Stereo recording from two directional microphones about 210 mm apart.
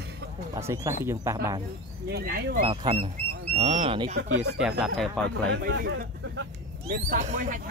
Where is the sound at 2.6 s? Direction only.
25° right (ahead or behind).